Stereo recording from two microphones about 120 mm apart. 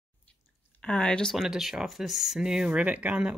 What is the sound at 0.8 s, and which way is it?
Speech, 10° left (ahead or behind).